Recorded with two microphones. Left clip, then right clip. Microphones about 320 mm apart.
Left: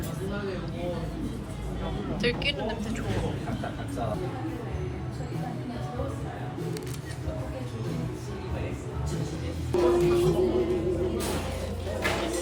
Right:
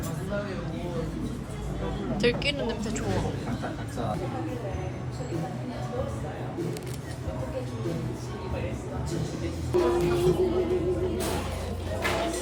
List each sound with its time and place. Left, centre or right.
2.1 s a woman's voice: centre
9.7 s music: centre